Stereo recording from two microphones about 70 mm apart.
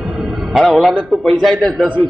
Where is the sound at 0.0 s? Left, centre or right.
Centre.